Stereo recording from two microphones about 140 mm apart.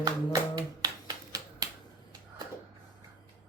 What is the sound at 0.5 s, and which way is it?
Finger snapping, 25° right (ahead or behind).